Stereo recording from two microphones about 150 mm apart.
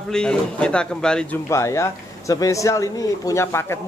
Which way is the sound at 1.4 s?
20° left (ahead or behind).